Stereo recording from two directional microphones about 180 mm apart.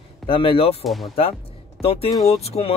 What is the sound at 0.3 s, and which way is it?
Speech, 30° left (ahead or behind).